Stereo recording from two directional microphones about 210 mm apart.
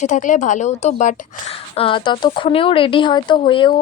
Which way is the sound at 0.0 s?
35° left (ahead or behind).